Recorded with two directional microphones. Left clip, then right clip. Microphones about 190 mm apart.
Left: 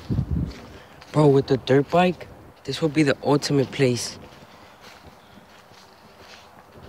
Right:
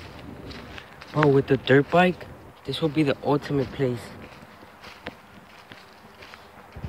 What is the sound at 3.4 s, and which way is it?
Speech, 40° left (ahead or behind).